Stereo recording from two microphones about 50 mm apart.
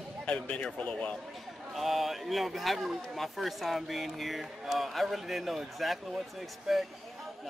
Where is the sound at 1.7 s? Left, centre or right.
Centre.